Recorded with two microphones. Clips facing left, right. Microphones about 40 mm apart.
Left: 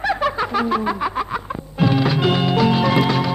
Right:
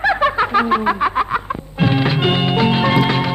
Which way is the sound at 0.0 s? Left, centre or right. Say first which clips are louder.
Right 5 dB; right.